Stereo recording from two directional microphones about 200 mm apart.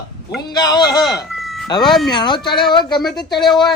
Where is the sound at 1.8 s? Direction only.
Centre (ahead or behind).